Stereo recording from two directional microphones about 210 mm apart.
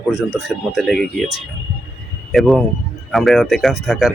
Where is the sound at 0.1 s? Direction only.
Centre (ahead or behind).